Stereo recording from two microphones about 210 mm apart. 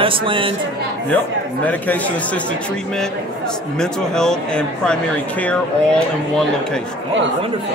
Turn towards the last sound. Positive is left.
turn(degrees=5)  # may be behind; listen again after turning